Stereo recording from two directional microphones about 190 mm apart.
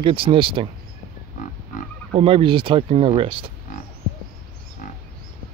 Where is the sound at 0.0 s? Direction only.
25° right (ahead or behind).